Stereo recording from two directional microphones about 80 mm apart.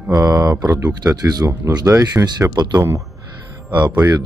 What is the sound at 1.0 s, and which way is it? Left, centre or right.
Speech, right.